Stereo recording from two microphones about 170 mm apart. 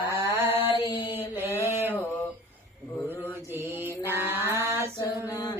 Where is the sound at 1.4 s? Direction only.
15° left (ahead or behind).